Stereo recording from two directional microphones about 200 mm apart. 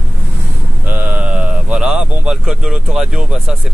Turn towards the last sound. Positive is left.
turn(degrees=0)  # may be behind; listen again after turning